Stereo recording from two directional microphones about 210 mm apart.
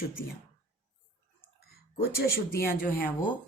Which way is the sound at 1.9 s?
45° left (ahead or behind).